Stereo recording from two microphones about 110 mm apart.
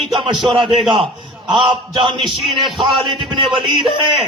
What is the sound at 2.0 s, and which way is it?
Speech, 50° right (ahead or behind).